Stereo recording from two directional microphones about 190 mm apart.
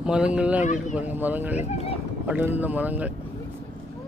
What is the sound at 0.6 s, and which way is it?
Speech, 40° left (ahead or behind).